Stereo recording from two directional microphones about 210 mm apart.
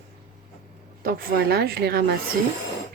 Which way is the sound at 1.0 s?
45° right (ahead or behind).